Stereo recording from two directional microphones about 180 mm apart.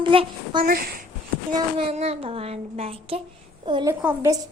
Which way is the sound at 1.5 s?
30° right (ahead or behind).